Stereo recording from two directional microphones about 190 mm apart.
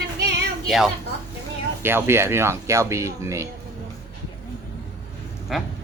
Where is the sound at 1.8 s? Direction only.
10° right (ahead or behind).